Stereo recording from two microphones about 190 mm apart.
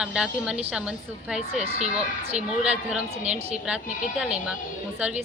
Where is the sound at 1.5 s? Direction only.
35° right (ahead or behind).